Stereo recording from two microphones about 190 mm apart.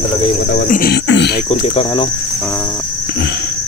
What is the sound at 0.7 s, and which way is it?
Beatboxing, 50° left (ahead or behind).